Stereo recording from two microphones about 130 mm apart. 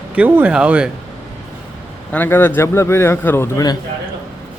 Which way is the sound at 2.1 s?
15° left (ahead or behind).